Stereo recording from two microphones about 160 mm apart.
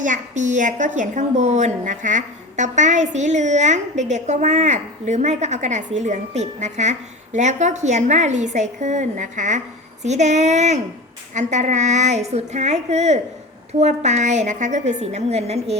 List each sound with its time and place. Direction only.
0.0 s a woman's voice: 50° right (ahead or behind)